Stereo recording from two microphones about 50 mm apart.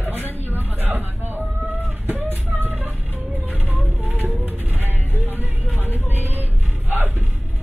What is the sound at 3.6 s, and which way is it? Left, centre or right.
Music, right.